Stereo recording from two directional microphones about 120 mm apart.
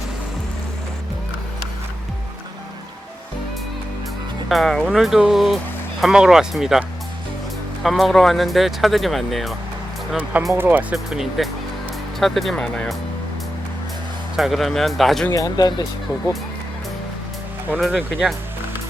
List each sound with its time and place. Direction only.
4.4 s speech: centre (ahead or behind)
7.9 s speech: centre (ahead or behind)
10.5 s speech: 15° right (ahead or behind)
10.9 s speech: centre (ahead or behind)
14.3 s speech: centre (ahead or behind)
15.3 s speech: 30° left (ahead or behind)
17.7 s speech: centre (ahead or behind)